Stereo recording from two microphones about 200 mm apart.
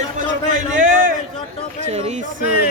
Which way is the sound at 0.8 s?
45° right (ahead or behind).